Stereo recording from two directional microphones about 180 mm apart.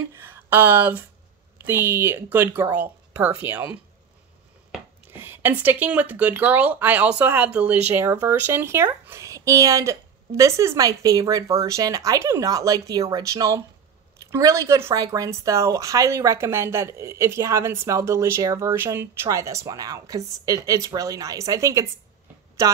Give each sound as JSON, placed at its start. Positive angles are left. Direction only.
{"t": 0.1, "sound": "speech", "side_deg": -10}
{"t": 4.7, "sound": "speech", "side_deg": -10}